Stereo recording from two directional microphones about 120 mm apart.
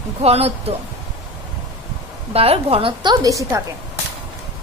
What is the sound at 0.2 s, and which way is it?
Speech, 55° right (ahead or behind).